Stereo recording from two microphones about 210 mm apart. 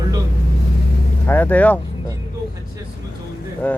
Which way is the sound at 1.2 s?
10° left (ahead or behind).